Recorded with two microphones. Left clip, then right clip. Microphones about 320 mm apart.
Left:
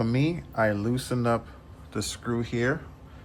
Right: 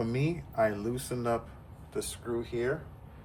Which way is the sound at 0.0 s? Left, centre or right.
Left.